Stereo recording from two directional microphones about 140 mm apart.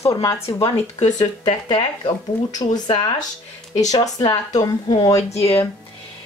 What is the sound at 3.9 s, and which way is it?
Speech, 30° left (ahead or behind).